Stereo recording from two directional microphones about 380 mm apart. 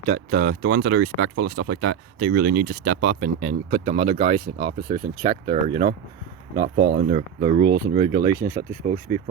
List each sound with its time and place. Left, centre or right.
0.1 s speech: right
6.9 s speech: right